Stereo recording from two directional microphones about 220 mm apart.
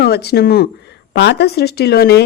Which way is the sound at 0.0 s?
45° left (ahead or behind).